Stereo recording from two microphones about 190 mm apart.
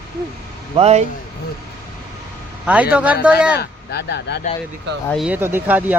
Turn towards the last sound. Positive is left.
turn(degrees=-10)  # may be behind; listen again after turning